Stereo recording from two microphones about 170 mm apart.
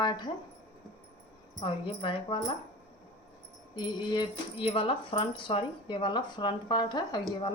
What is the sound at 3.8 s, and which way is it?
Speech, 25° left (ahead or behind).